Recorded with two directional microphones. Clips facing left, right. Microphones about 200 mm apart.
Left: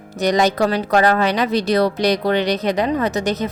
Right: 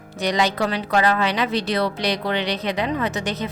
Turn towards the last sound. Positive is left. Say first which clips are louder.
# left 5 dB
turn(degrees=40)  # may be behind; listen again after turning